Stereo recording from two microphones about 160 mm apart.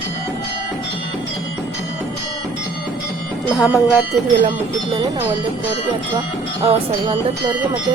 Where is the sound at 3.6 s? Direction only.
5° right (ahead or behind).